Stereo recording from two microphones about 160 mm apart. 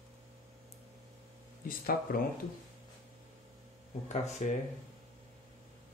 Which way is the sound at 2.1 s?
60° left (ahead or behind).